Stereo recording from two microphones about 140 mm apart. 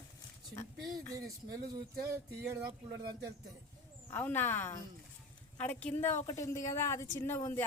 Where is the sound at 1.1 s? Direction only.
25° right (ahead or behind).